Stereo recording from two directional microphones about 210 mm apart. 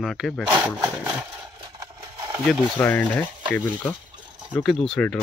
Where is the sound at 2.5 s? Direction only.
Centre (ahead or behind).